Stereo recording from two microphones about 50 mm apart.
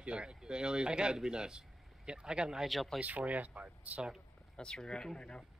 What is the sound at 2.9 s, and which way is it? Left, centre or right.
Speech, right.